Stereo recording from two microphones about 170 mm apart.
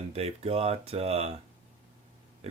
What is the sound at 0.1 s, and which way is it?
Speech, 35° right (ahead or behind).